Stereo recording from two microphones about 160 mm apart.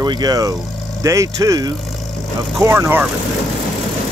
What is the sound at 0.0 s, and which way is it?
Speech, 25° right (ahead or behind).